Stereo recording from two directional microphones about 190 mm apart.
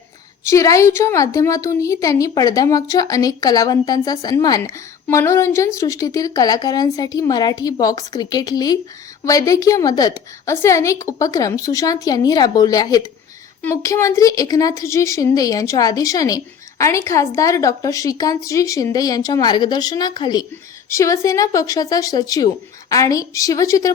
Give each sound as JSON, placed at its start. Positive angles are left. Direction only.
{"t": 0.4, "sound": "a woman's voice", "side_deg": 15}